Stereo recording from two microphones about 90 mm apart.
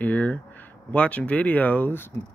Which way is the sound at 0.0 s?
15° left (ahead or behind).